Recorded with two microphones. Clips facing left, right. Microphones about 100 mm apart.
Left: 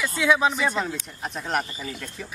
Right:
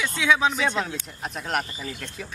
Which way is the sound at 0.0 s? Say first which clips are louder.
Left 1 dB; 5° left (ahead or behind).